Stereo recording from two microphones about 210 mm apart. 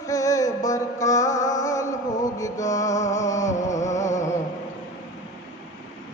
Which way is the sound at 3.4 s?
35° left (ahead or behind).